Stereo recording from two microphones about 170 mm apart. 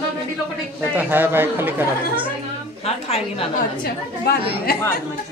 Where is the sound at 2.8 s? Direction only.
35° left (ahead or behind).